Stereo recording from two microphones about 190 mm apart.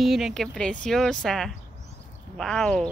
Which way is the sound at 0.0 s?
Centre (ahead or behind).